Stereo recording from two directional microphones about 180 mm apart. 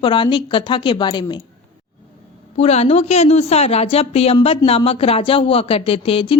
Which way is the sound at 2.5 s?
35° left (ahead or behind).